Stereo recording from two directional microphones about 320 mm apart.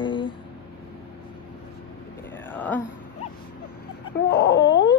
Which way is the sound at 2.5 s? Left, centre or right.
Centre.